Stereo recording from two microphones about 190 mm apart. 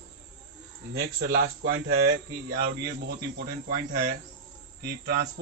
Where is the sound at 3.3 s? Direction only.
55° right (ahead or behind).